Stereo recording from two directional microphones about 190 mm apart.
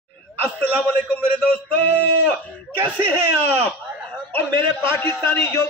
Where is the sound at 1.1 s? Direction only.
5° left (ahead or behind).